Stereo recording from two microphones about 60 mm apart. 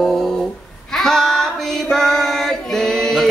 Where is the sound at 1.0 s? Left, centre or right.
Centre.